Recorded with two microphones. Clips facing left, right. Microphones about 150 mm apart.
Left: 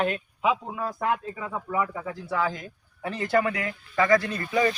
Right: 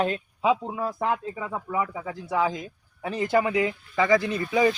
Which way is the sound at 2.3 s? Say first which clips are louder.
Right 3 dB; 20° right (ahead or behind).